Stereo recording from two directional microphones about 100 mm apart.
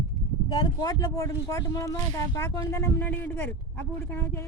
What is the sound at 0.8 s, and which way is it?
Speech, 40° left (ahead or behind).